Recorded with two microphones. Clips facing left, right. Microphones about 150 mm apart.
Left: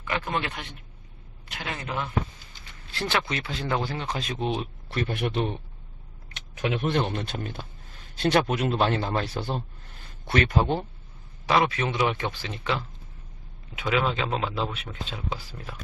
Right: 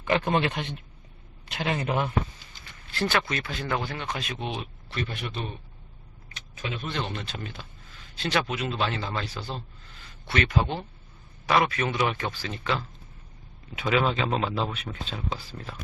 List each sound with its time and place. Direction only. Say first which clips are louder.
0.0 s a man's voice: right 5 dB; 25° right (ahead or behind)
2.9 s speech: right 1 dB; 20° left (ahead or behind); by 4.6 s 35° left (ahead or behind)
4.9 s speech: left 6 dB; 55° left (ahead or behind)
6.3 s speech: left 7 dB; 80° left; by 10.8 s 45° left (ahead or behind)
11.4 s speech: left 1 dB; 25° left (ahead or behind)
13.8 s speech: right 1 dB; centre (ahead or behind)